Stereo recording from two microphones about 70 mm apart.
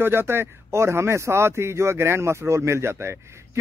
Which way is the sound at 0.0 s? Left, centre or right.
Right.